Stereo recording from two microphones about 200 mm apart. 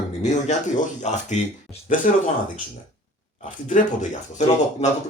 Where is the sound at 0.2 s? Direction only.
35° left (ahead or behind).